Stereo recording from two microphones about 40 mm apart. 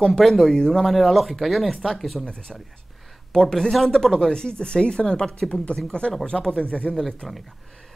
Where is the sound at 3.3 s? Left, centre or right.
Centre.